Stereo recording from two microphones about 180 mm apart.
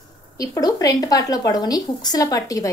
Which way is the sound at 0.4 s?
20° left (ahead or behind).